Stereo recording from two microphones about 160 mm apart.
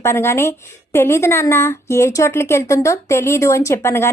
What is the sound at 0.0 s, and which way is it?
Speech, 15° left (ahead or behind).